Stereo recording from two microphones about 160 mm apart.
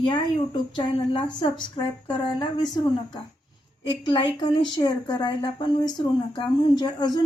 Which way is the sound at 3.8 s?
30° left (ahead or behind).